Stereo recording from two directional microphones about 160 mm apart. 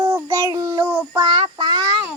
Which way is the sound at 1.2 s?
30° right (ahead or behind).